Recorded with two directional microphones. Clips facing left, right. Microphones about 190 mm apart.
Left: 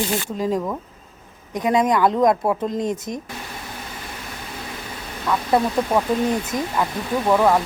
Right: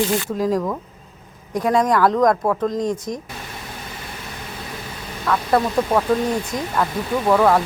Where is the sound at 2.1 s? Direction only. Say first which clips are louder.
Right 1 dB; 15° left (ahead or behind).